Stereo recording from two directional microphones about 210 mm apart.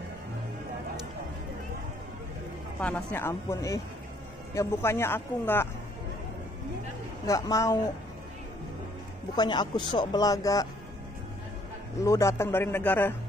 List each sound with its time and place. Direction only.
2.8 s speech: 10° left (ahead or behind)
7.2 s speech: 15° left (ahead or behind)
9.3 s speech: 20° left (ahead or behind)
12.0 s speech: 15° left (ahead or behind)